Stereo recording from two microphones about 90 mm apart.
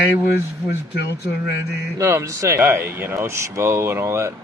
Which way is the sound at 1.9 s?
35° right (ahead or behind).